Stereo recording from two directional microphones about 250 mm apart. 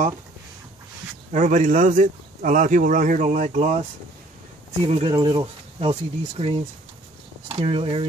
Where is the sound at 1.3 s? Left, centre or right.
Right.